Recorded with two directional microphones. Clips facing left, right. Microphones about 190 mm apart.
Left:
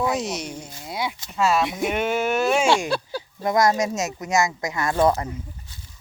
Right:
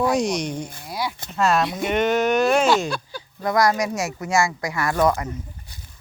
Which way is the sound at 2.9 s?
35° left (ahead or behind).